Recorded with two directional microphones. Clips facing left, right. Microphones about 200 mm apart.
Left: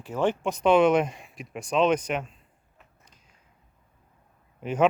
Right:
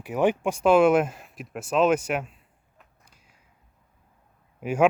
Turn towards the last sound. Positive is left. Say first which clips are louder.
# right 2 dB
turn(degrees=-10)  # may be behind; listen again after turning